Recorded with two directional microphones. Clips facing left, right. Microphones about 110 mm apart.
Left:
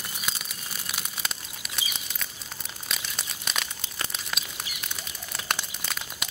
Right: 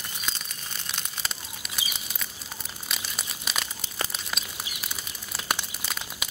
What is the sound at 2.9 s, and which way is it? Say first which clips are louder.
Crumpling: even; 5° right (ahead or behind).